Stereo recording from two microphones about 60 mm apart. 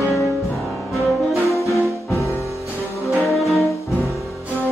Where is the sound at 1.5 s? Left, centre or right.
Left.